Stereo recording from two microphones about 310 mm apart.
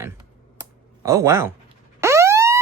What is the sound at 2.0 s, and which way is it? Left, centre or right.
Police car, centre.